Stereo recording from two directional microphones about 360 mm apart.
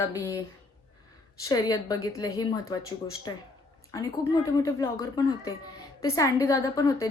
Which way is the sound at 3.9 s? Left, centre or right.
Centre.